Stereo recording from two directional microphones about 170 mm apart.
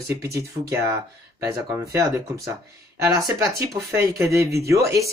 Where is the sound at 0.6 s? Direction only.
35° right (ahead or behind).